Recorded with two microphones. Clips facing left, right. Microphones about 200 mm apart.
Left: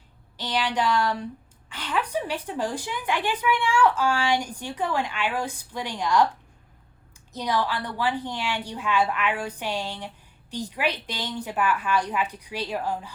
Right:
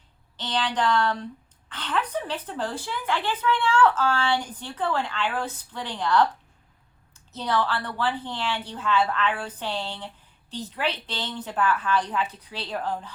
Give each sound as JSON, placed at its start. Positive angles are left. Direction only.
{"t": 0.3, "sound": "a woman's voice", "side_deg": 10}
{"t": 7.3, "sound": "a woman's voice", "side_deg": 10}